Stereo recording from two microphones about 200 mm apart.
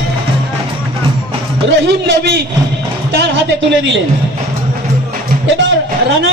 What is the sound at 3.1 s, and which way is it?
Music, 55° right (ahead or behind).